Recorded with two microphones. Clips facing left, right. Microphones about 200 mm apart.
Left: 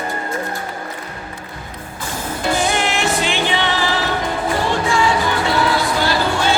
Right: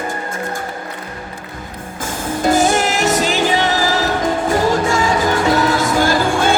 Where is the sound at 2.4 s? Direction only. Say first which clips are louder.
Right 5 dB; 45° right (ahead or behind).